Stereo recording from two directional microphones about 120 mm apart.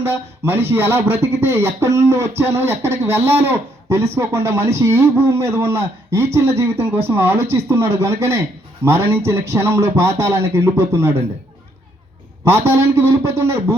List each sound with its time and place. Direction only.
0.1 s speech: 20° right (ahead or behind)
12.5 s speech: 20° right (ahead or behind)